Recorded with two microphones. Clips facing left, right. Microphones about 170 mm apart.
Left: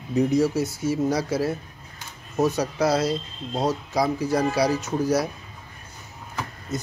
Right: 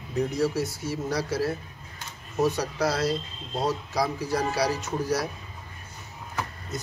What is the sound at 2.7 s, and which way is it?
Speech, 20° left (ahead or behind).